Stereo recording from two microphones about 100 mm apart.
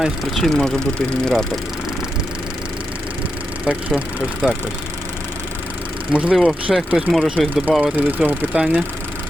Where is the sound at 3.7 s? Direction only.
10° right (ahead or behind).